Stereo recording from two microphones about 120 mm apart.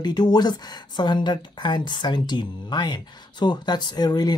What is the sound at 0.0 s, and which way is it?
Speech, 35° left (ahead or behind).